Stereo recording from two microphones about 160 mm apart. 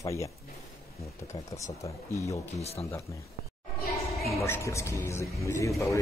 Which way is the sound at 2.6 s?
40° left (ahead or behind).